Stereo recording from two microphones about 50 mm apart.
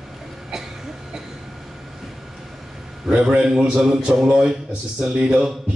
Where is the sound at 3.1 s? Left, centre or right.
Right.